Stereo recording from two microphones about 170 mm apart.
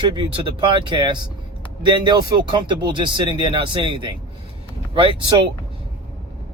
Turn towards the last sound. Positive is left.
turn(degrees=-30)  # may be behind; listen again after turning